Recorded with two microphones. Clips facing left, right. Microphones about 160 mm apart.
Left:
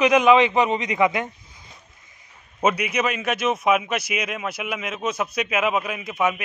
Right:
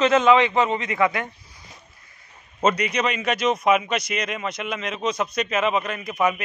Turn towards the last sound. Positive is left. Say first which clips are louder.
# right 1 dB
turn(degrees=0)  # may be behind; listen again after turning